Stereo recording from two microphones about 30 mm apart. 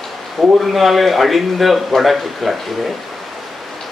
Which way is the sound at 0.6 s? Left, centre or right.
Centre.